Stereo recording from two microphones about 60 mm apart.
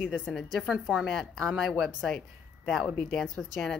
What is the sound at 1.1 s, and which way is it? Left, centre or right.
A woman's voice, centre.